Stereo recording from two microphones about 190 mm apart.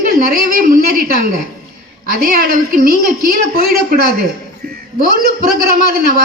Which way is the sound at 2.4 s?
50° right (ahead or behind).